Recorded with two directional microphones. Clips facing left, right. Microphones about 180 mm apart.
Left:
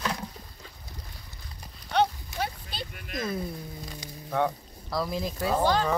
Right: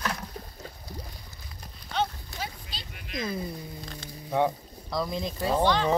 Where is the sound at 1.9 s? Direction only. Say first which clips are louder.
Left 5 dB; 60° left (ahead or behind).